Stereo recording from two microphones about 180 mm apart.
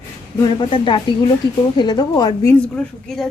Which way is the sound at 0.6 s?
25° left (ahead or behind).